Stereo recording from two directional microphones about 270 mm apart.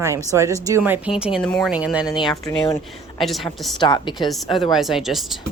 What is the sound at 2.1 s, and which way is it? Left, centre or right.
Speech, centre.